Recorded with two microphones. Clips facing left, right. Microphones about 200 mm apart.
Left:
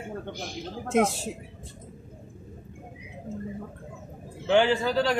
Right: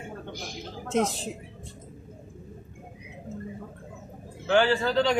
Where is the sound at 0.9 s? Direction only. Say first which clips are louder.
Left 2 dB; 10° left (ahead or behind).